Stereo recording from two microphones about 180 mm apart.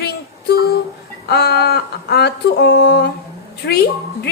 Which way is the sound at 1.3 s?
60° left (ahead or behind).